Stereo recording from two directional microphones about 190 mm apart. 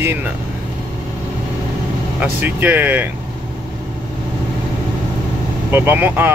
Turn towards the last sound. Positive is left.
turn(degrees=-10)  # may be behind; listen again after turning